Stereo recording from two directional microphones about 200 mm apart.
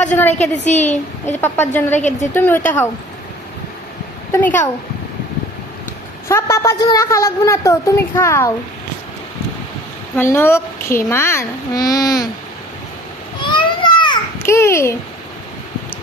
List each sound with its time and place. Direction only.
0.0 s a woman's voice: 5° left (ahead or behind)
0.7 s a woman's voice: 35° left (ahead or behind)
1.2 s a woman's voice: 10° left (ahead or behind)
4.3 s a woman's voice: 10° left (ahead or behind)
6.2 s a woman's voice: 15° left (ahead or behind)
10.1 s a woman's voice: 10° left (ahead or behind)
13.4 s a sound: 25° left (ahead or behind)